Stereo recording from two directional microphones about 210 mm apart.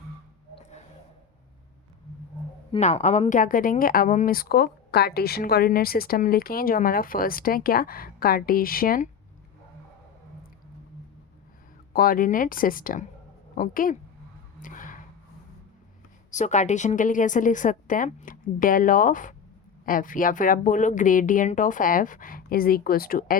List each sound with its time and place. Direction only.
2.7 s speech: 30° left (ahead or behind)
11.9 s speech: 40° left (ahead or behind)
14.6 s a sound: 40° left (ahead or behind)
16.3 s speech: 35° left (ahead or behind)